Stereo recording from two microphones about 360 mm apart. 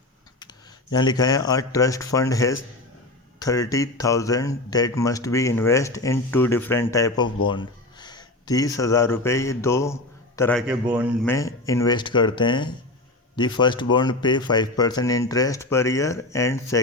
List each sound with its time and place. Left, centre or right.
0.9 s speech: centre